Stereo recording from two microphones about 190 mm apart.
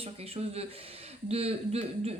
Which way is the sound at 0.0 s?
30° right (ahead or behind).